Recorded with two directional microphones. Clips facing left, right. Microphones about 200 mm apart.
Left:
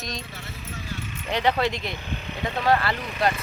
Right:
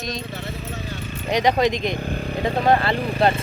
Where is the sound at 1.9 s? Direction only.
45° right (ahead or behind).